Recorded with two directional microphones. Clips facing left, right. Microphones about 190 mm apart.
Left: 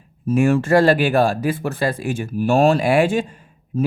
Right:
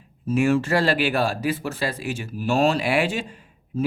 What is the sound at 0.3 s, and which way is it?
Speech, 55° left (ahead or behind).